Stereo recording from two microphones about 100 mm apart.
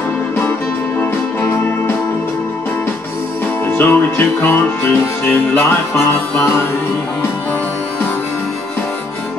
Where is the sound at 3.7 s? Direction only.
20° left (ahead or behind).